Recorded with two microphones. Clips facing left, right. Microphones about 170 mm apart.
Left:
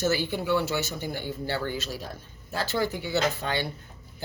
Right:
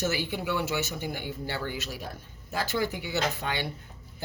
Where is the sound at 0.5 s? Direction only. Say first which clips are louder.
Left 2 dB; 15° right (ahead or behind).